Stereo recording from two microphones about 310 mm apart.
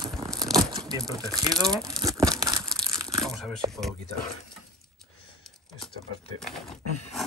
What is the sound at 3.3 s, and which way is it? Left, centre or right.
Shuffling cards, centre.